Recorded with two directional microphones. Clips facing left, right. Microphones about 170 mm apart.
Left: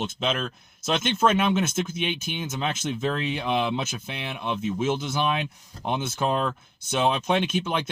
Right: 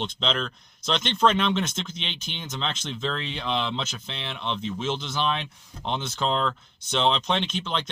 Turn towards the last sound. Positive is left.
turn(degrees=10)  # may be behind; listen again after turning